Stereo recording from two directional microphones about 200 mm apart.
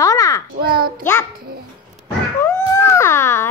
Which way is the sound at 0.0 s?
15° left (ahead or behind).